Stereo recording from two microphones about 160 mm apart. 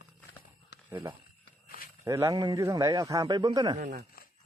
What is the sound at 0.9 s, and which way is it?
A man's voice, 10° right (ahead or behind).